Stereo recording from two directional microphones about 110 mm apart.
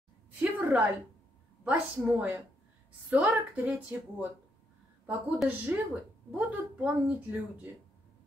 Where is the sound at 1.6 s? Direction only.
15° right (ahead or behind).